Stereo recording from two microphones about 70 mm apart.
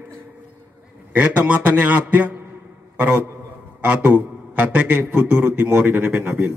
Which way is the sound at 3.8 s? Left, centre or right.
Centre.